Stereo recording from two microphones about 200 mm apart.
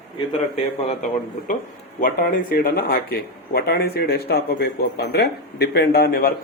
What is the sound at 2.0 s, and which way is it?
Speech, 45° left (ahead or behind).